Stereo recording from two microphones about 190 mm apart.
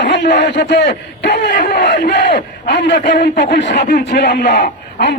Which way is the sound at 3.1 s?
50° left (ahead or behind).